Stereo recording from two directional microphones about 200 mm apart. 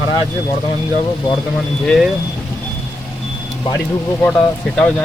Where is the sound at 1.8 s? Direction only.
Centre (ahead or behind).